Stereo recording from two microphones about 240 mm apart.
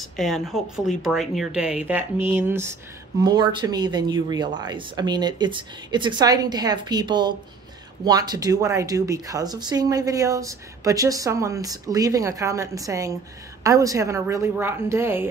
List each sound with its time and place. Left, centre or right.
0.2 s a woman's voice: centre